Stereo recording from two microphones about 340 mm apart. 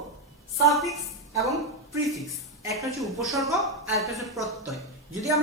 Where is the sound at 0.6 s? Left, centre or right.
Centre.